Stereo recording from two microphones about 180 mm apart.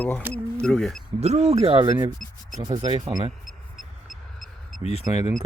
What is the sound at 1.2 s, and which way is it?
Speech, 35° right (ahead or behind).